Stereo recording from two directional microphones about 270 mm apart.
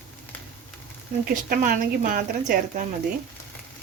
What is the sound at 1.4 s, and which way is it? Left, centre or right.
A woman's voice, right.